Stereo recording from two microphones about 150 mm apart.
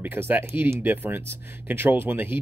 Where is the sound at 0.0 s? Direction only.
15° right (ahead or behind).